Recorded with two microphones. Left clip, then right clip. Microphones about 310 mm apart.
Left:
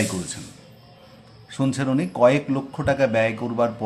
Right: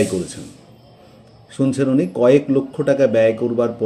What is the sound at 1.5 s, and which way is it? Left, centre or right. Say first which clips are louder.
Speech: right 6 dB; centre.